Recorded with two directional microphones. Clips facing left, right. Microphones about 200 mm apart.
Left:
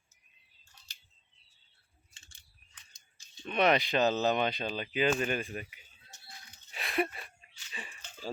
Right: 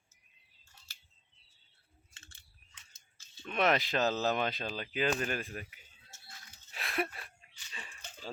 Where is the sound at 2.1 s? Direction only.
15° left (ahead or behind).